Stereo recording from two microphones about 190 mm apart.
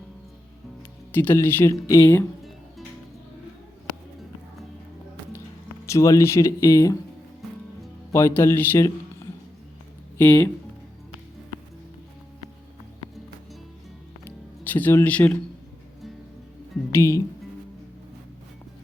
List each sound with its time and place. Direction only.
0.8 s speech: 10° left (ahead or behind)
5.8 s speech: 15° left (ahead or behind)
8.1 s speech: 15° left (ahead or behind)
10.2 s speech: 15° left (ahead or behind)
14.3 s music: 10° left (ahead or behind)
16.9 s speech: 15° left (ahead or behind)